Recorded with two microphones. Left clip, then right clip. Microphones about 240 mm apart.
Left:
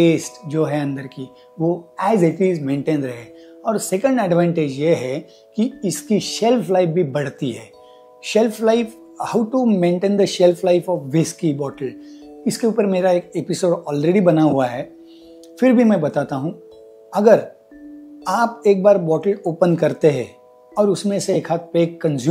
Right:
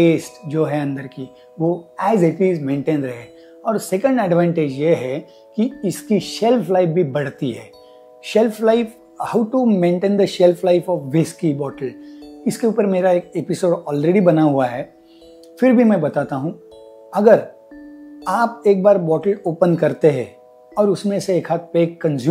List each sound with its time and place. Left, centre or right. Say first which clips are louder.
0.0 s speech: right 1 dB; left